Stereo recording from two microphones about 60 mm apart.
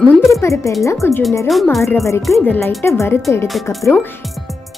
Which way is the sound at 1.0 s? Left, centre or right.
Left.